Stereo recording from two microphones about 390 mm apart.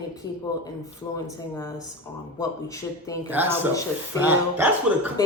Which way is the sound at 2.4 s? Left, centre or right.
Centre.